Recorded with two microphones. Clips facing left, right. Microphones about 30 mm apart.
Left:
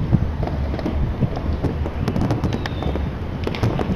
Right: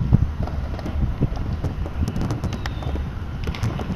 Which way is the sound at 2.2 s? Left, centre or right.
Left.